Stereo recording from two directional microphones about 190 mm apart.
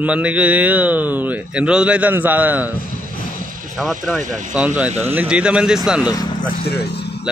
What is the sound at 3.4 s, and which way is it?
Vehicle, 45° right (ahead or behind).